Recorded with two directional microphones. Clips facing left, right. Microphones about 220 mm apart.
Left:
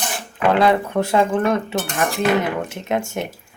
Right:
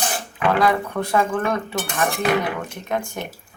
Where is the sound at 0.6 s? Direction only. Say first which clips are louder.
Left 4 dB; 25° left (ahead or behind).